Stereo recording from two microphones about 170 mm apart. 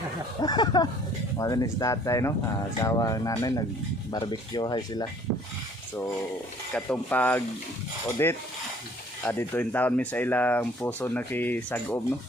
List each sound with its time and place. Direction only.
0.4 s speech: 25° left (ahead or behind)
6.7 s speech: 10° left (ahead or behind)